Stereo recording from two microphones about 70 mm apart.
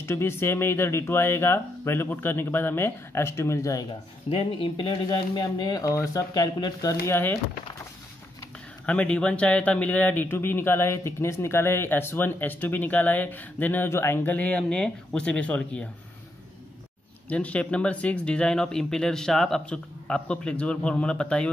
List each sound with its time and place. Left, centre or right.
0.0 s speech: left
5.6 s speech: left
6.3 s speech: left
7.1 s speech: left
8.8 s speech: centre; by 14.3 s left
14.3 s speech: centre
17.3 s speech: centre